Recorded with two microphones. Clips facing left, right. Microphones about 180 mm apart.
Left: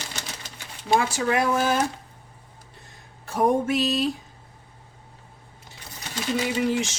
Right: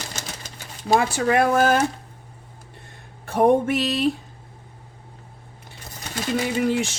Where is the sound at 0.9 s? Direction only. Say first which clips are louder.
Right 3 dB; 55° right (ahead or behind).